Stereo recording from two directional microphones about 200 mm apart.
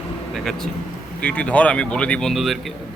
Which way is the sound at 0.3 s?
Centre (ahead or behind).